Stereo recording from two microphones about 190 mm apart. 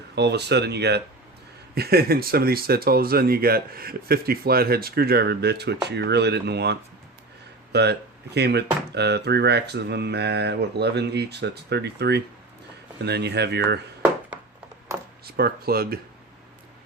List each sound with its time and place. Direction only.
0.2 s speech: 60° right (ahead or behind)
15.3 s speech: 55° right (ahead or behind)